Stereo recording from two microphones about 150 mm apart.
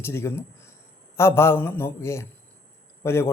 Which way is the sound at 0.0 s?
15° left (ahead or behind).